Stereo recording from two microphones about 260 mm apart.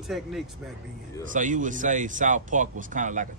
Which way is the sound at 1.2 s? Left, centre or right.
Right.